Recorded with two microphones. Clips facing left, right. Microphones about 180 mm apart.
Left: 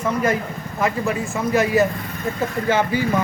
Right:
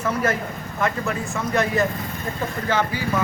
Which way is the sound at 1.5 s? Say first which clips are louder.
Left 4 dB; 5° left (ahead or behind).